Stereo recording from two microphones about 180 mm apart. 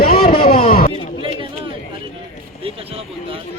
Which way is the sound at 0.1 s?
55° left (ahead or behind).